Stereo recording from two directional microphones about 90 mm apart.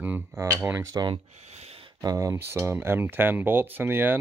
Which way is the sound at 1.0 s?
40° right (ahead or behind).